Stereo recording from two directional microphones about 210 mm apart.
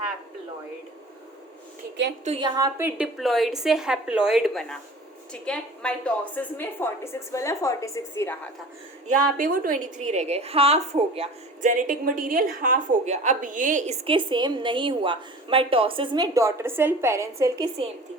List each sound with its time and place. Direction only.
2.2 s a woman's voice: 30° right (ahead or behind)
2.6 s a woman's voice: 15° right (ahead or behind)
3.2 s a woman's voice: centre (ahead or behind)
9.1 s a woman's voice: 40° right (ahead or behind); by 17.7 s 15° right (ahead or behind)